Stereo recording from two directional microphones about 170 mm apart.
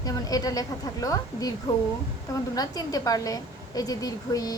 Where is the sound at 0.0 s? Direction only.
20° left (ahead or behind).